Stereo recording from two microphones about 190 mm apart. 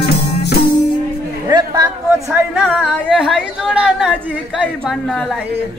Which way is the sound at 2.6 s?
Centre (ahead or behind).